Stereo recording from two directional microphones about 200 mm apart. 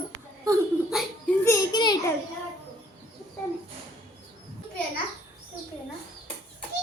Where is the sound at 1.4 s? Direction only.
20° left (ahead or behind).